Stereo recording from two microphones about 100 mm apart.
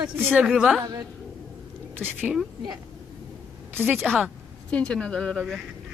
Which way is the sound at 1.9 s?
20° right (ahead or behind).